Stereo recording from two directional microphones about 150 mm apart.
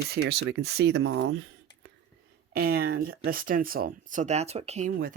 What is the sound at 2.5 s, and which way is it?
Speech, 90° right.